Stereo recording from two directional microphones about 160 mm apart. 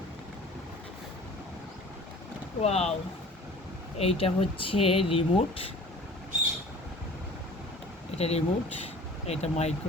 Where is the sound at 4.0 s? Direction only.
35° left (ahead or behind).